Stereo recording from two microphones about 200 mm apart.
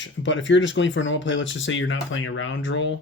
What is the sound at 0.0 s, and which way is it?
Speech, 65° left (ahead or behind).